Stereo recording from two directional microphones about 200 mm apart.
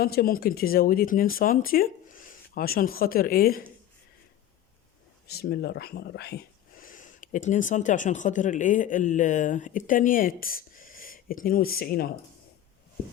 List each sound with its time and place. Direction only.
0.0 s speech: 50° left (ahead or behind)
5.3 s speech: 55° left (ahead or behind)